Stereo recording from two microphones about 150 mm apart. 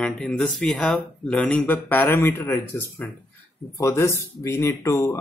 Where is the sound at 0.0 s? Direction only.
5° left (ahead or behind).